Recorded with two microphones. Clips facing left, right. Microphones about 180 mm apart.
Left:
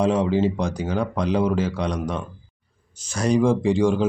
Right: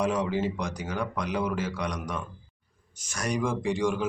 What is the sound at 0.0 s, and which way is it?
Speech, 30° left (ahead or behind).